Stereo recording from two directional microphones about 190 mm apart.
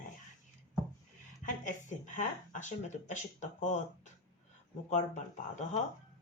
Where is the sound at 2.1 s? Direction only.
40° left (ahead or behind).